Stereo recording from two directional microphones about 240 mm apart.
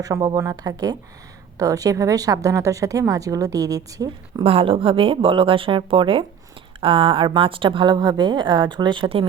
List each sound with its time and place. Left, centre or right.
0.0 s a woman's voice: centre